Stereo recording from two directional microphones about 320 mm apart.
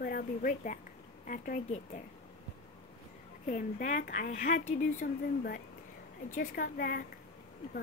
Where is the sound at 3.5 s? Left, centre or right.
Left.